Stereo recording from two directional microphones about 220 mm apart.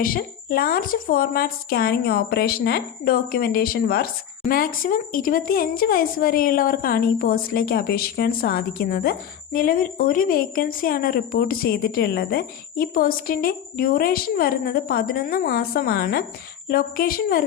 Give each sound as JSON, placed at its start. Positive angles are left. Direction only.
{"t": 0.0, "sound": "a woman's voice", "side_deg": 40}